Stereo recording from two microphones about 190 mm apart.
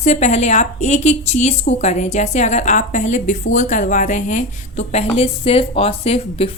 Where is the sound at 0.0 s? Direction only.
35° left (ahead or behind).